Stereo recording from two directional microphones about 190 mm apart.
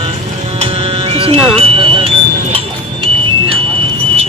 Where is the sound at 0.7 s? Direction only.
30° right (ahead or behind).